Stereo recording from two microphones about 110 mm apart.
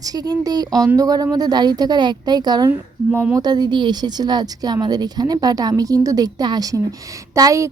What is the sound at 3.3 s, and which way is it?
A woman's voice, 40° right (ahead or behind).